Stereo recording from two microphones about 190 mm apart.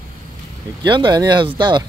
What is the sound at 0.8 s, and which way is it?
Speech, 25° right (ahead or behind).